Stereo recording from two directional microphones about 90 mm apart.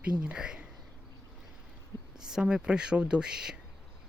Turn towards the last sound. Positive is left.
turn(degrees=-10)  # may be behind; listen again after turning